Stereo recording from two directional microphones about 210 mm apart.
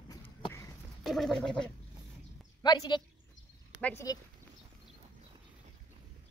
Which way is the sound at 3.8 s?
5° left (ahead or behind).